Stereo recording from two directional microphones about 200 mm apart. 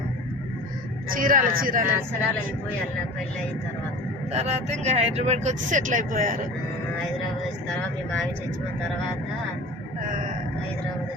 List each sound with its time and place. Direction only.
1.1 s speech: 45° right (ahead or behind)
4.3 s speech: 30° right (ahead or behind)